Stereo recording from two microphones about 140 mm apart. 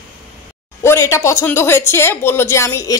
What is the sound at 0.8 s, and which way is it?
Speech, 20° left (ahead or behind).